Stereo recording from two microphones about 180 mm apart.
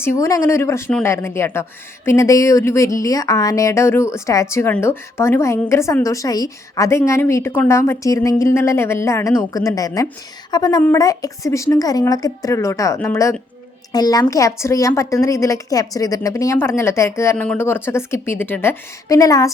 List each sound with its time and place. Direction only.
0.0 s a woman's voice: 15° left (ahead or behind)